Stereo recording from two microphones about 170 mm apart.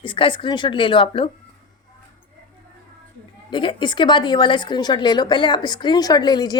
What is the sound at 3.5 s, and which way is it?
A woman's voice, 30° left (ahead or behind).